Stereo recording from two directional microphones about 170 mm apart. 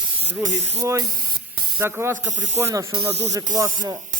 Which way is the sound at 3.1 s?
40° right (ahead or behind).